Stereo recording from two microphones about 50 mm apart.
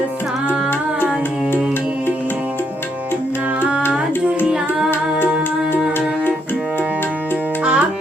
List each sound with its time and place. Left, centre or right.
4.4 s music: centre
7.6 s music: right